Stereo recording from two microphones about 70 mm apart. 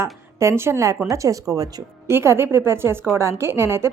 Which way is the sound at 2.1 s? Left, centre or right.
Right.